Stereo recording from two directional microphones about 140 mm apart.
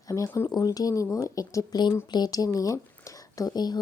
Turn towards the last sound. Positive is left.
turn(degrees=30)  # may be behind; listen again after turning